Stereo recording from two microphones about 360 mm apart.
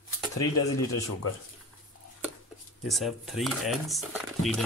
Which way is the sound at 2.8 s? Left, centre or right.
Centre.